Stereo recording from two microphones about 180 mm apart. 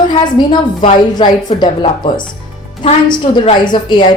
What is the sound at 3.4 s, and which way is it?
Speech, 25° left (ahead or behind).